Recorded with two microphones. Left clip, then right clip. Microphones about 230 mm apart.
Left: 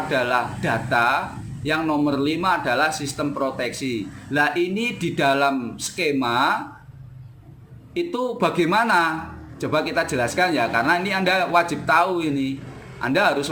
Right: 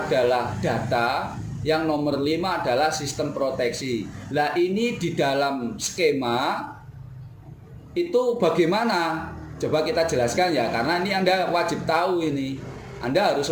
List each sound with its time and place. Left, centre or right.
0.1 s a man's voice: left
7.9 s a man's voice: left